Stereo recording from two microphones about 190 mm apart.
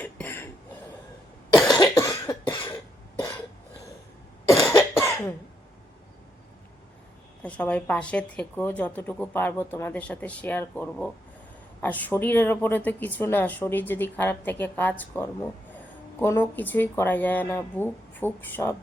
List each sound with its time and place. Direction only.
0.0 s cough: 10° left (ahead or behind)
1.7 s cough: 20° left (ahead or behind)
4.4 s cough: 15° left (ahead or behind)
7.4 s speech: 5° left (ahead or behind)